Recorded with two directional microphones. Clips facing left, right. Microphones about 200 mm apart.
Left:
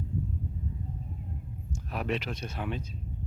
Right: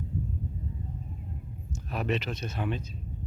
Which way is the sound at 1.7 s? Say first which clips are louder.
Right 2 dB; 10° left (ahead or behind).